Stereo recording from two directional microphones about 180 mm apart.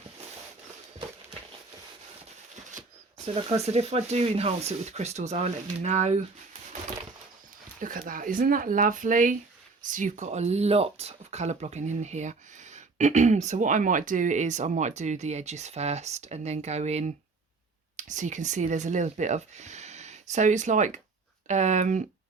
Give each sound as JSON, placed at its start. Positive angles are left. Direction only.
{"t": 2.6, "sound": "a sound", "side_deg": -45}
{"t": 3.3, "sound": "speech", "side_deg": -35}
{"t": 7.8, "sound": "speech", "side_deg": -50}